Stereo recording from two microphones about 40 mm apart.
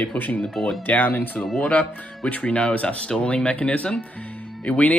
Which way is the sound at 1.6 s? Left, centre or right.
Left.